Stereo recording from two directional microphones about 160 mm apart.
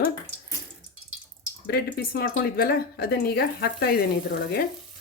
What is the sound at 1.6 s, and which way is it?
Speech, 80° left.